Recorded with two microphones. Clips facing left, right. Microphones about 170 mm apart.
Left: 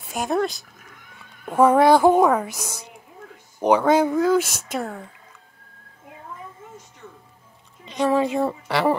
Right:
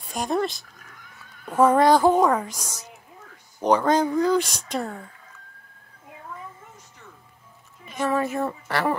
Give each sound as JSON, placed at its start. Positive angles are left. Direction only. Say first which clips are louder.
{"t": 0.1, "sound": "speech", "louder": "left 2 dB", "side_deg": 0}
{"t": 7.8, "sound": "a sound", "louder": "left 4 dB", "side_deg": 20}
{"t": 8.2, "sound": "speech", "louder": "left 4 dB", "side_deg": 15}